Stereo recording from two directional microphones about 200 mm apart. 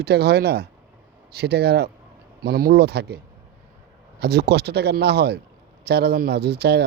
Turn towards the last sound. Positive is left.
turn(degrees=-55)  # may be behind; listen again after turning